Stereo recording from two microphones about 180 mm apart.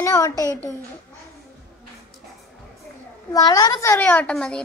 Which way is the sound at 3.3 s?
20° left (ahead or behind).